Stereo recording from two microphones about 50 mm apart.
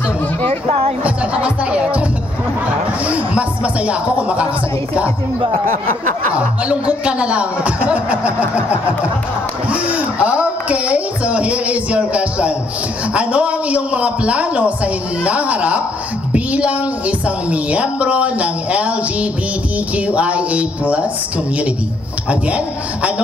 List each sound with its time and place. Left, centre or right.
1.0 s music: right
3.1 s music: right
6.3 s speech: right
16.3 s a sound: right
17.5 s speech: right